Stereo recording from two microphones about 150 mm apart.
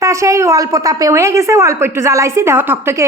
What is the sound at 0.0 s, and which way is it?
A woman's voice, 20° right (ahead or behind).